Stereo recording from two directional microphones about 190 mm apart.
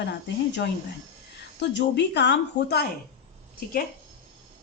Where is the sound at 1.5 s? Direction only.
65° left (ahead or behind).